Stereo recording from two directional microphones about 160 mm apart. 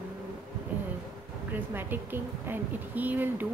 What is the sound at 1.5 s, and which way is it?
A woman's voice, 10° right (ahead or behind).